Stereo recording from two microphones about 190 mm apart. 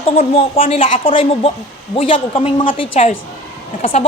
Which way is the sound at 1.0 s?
30° left (ahead or behind).